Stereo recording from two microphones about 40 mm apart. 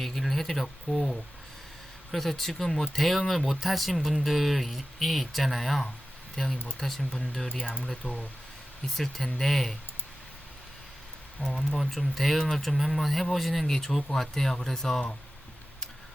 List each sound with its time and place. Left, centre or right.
0.0 s speech: centre
7.4 s speech: centre
8.0 s speech: left
9.0 s speech: centre
11.5 s speech: centre